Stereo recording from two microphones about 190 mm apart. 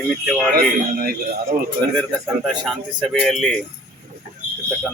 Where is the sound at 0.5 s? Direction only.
50° right (ahead or behind).